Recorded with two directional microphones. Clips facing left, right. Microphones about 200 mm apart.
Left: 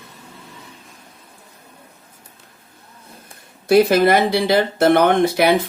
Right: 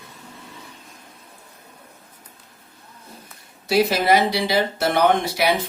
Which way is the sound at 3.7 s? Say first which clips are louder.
Left 5 dB; 55° left (ahead or behind).